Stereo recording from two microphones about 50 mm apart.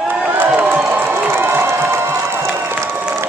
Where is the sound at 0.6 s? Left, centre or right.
Right.